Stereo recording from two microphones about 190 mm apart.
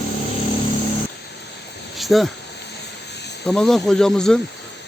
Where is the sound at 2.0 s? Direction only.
Centre (ahead or behind).